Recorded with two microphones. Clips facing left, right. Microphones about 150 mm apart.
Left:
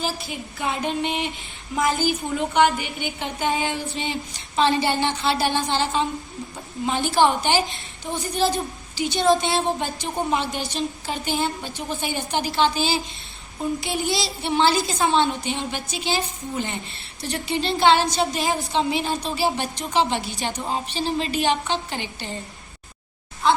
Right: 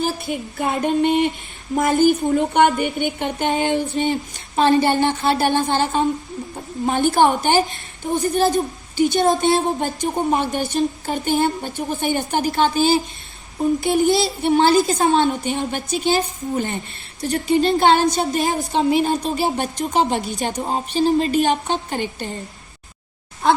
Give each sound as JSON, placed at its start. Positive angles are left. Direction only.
{"t": 0.6, "sound": "a woman's voice", "side_deg": -45}
{"t": 23.4, "sound": "speech", "side_deg": -55}